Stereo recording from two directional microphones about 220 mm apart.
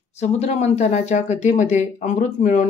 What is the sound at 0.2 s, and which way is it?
Speech, 30° left (ahead or behind).